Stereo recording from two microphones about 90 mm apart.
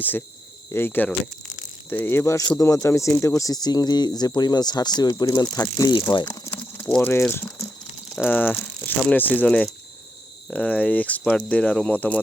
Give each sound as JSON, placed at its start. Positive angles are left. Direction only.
{"t": 0.0, "sound": "speech", "side_deg": 20}
{"t": 5.9, "sound": "speech", "side_deg": 60}
{"t": 6.2, "sound": "a sound", "side_deg": 30}
{"t": 7.0, "sound": "speech", "side_deg": 25}